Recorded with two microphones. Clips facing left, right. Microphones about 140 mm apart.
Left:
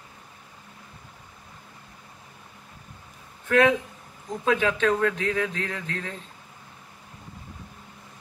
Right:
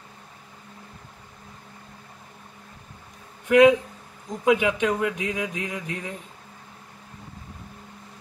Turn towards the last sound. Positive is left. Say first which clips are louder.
# right 1 dB
turn(degrees=-15)  # may be behind; listen again after turning